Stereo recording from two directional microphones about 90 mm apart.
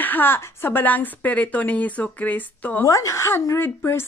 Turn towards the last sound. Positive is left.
turn(degrees=30)  # may be behind; listen again after turning